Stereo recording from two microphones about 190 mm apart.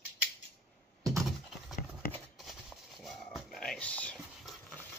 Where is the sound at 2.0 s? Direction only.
50° left (ahead or behind).